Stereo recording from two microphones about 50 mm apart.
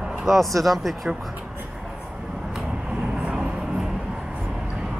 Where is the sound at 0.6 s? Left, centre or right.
Centre.